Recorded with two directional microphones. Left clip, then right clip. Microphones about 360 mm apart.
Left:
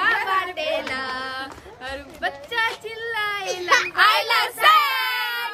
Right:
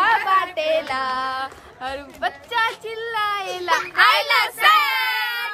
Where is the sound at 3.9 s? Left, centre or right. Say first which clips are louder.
Right 2 dB; centre.